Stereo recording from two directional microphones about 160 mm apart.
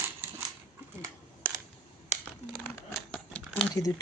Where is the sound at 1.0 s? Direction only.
15° right (ahead or behind).